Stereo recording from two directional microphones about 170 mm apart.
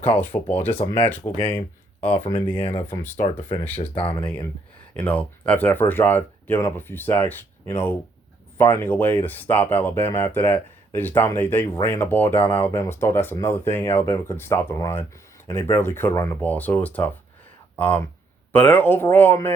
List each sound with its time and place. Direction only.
0.2 s speech: 10° left (ahead or behind)
2.6 s speech: 35° left (ahead or behind)
2.8 s speech: 10° left (ahead or behind)
3.9 s speech: 35° left (ahead or behind)
4.9 s speech: 10° left (ahead or behind)